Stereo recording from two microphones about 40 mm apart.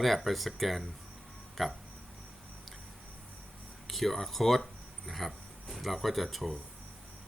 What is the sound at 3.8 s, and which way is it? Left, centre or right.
Speech, centre.